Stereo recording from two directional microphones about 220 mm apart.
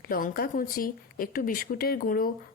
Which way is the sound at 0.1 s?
40° left (ahead or behind).